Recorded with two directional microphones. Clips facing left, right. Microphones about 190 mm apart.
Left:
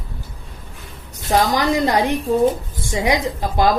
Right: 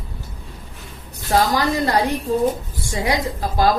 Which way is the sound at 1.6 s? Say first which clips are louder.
Left 2 dB; 20° left (ahead or behind).